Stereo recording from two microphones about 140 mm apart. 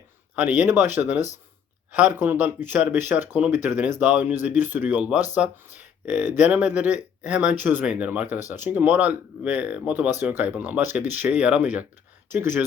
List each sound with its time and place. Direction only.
0.3 s speech: 10° right (ahead or behind)